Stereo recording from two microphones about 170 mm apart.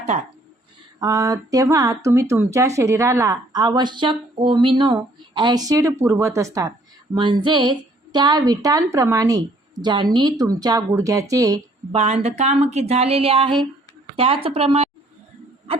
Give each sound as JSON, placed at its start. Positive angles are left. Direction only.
{"t": 0.9, "sound": "speech", "side_deg": -20}
{"t": 11.9, "sound": "speech", "side_deg": -40}